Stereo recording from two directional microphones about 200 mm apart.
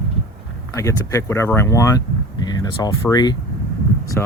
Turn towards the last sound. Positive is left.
turn(degrees=10)  # may be behind; listen again after turning